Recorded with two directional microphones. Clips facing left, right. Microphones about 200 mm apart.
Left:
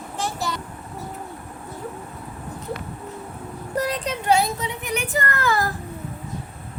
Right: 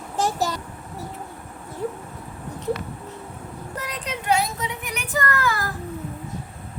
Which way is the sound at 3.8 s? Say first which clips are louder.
Left 2 dB; 30° left (ahead or behind).